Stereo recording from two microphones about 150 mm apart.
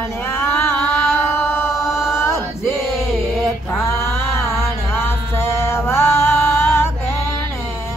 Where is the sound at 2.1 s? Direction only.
15° left (ahead or behind).